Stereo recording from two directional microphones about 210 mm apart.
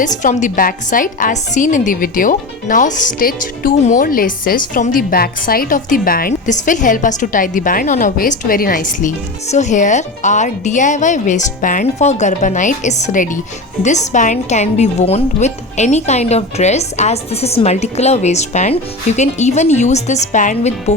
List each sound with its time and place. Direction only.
0.0 s a woman's voice: 35° left (ahead or behind)